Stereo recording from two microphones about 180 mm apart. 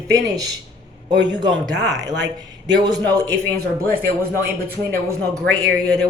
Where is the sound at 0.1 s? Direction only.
20° right (ahead or behind).